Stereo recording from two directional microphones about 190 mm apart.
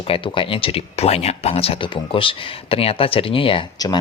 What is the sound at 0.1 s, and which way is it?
Speech, 25° left (ahead or behind).